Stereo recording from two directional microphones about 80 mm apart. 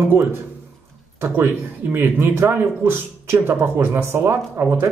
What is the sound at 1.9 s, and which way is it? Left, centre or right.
A man's voice, right.